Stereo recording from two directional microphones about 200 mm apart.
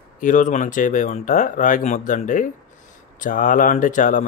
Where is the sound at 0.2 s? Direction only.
40° left (ahead or behind).